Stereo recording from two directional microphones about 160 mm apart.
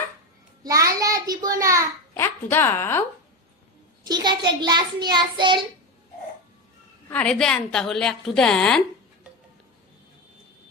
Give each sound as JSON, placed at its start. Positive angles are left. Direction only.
{"t": 0.6, "sound": "a sound", "side_deg": -20}
{"t": 2.1, "sound": "a woman's voice", "side_deg": 15}
{"t": 4.0, "sound": "a child's voice", "side_deg": -25}
{"t": 7.1, "sound": "a woman's voice", "side_deg": 5}